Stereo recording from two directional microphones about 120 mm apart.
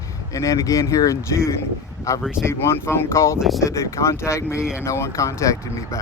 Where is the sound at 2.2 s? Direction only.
5° right (ahead or behind).